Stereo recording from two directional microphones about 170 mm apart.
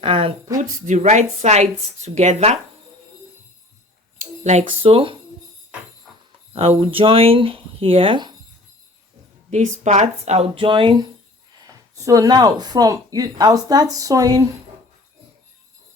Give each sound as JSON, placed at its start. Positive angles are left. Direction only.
{"t": 0.0, "sound": "speech", "side_deg": -30}
{"t": 0.6, "sound": "speech", "side_deg": -45}
{"t": 4.2, "sound": "speech", "side_deg": -40}
{"t": 6.5, "sound": "speech", "side_deg": -35}
{"t": 9.5, "sound": "speech", "side_deg": -45}